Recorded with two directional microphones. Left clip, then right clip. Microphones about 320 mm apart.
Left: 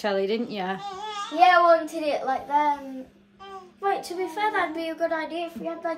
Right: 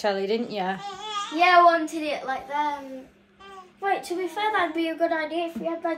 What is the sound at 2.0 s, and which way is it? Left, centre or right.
Speech, left.